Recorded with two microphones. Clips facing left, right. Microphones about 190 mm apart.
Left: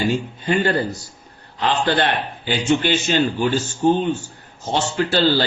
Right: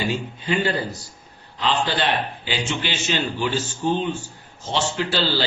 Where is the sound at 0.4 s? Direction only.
50° left (ahead or behind).